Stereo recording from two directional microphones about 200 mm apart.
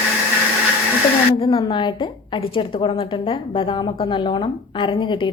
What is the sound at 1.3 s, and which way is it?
A woman's voice, 25° left (ahead or behind).